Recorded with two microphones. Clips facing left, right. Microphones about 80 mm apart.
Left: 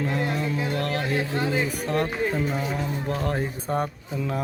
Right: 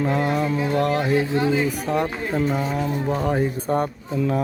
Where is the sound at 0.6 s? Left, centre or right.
Right.